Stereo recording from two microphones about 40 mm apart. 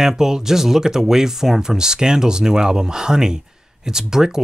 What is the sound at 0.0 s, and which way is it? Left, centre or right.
Speech, centre.